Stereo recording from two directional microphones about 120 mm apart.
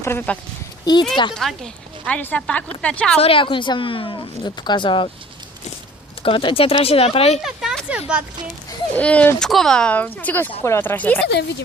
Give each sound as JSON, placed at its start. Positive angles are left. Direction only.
{"t": 0.0, "sound": "speech", "side_deg": 20}
{"t": 0.9, "sound": "speech", "side_deg": 35}
{"t": 1.4, "sound": "speech", "side_deg": 5}
{"t": 3.2, "sound": "a woman's voice", "side_deg": 50}
{"t": 6.2, "sound": "a woman's voice", "side_deg": 45}
{"t": 7.4, "sound": "speech", "side_deg": -5}
{"t": 9.0, "sound": "speech", "side_deg": 10}